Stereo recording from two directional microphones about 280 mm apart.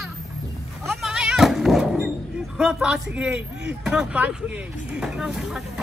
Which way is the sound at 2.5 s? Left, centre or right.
Centre.